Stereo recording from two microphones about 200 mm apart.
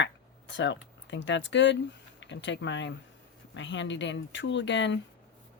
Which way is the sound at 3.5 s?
65° left (ahead or behind).